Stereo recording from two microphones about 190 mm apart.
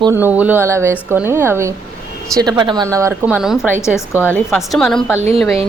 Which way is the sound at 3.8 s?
15° left (ahead or behind).